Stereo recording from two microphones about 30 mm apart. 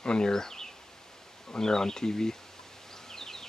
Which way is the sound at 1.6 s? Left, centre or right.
Centre.